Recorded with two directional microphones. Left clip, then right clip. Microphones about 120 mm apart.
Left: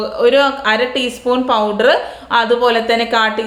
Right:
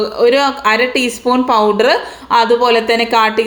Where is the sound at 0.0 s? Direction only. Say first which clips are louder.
Right 1 dB; 30° right (ahead or behind).